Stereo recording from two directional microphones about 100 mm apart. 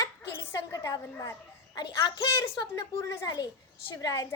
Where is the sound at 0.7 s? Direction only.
35° left (ahead or behind).